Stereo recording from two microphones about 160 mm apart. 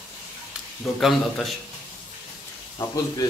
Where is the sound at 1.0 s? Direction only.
Centre (ahead or behind).